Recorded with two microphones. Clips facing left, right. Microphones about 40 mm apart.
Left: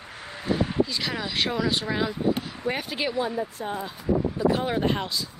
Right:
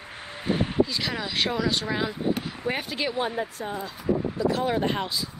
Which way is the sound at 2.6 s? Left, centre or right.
Centre.